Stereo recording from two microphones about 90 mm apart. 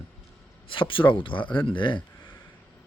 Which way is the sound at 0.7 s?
70° left (ahead or behind).